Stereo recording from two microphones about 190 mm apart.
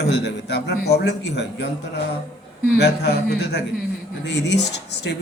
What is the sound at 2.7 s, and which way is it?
A man's voice, 60° left (ahead or behind).